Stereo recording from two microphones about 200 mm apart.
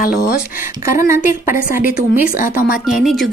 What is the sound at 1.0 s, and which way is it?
A woman's voice, 15° right (ahead or behind).